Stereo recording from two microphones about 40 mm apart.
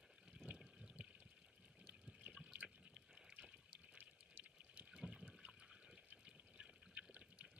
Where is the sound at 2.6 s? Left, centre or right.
Right.